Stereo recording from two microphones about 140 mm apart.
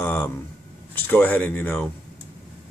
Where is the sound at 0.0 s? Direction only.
15° left (ahead or behind).